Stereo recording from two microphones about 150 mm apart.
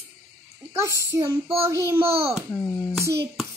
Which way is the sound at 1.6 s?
15° right (ahead or behind).